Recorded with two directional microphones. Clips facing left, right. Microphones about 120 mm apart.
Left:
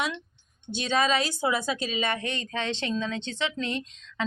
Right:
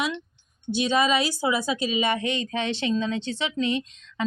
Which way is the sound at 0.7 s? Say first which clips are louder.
Right 3 dB; 10° right (ahead or behind).